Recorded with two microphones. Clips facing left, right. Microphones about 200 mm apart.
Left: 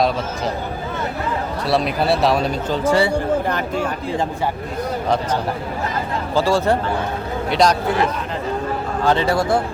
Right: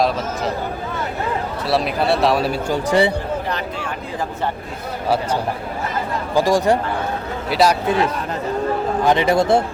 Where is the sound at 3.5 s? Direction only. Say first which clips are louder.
Left 4 dB; 45° left (ahead or behind).